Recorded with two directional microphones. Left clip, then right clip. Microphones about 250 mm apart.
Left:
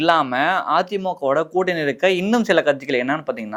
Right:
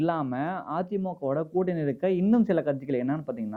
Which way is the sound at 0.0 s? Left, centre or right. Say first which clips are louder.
Left 12 dB; centre.